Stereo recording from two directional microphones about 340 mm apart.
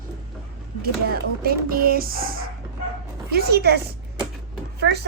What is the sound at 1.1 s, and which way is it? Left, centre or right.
A woman's voice, right.